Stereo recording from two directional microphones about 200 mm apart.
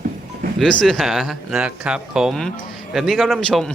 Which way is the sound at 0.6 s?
5° left (ahead or behind).